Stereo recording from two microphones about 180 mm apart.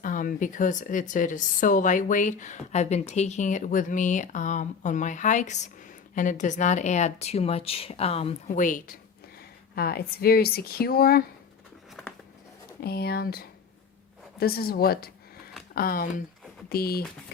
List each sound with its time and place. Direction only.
0.0 s a woman's voice: 50° left (ahead or behind)
9.7 s speech: 60° left (ahead or behind)
12.8 s a woman's voice: 60° left (ahead or behind)